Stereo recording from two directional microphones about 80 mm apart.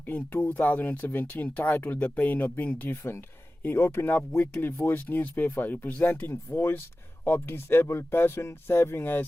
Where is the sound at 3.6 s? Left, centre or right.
Left.